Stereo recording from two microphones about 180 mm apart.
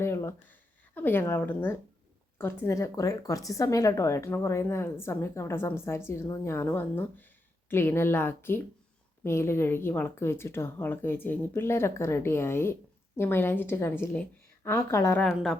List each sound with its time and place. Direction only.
0.0 s speech: 15° left (ahead or behind)
15.2 s a woman's voice: 5° left (ahead or behind)